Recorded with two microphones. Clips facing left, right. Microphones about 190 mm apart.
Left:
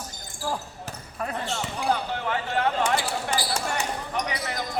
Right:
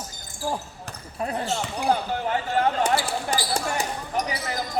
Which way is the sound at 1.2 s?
35° right (ahead or behind).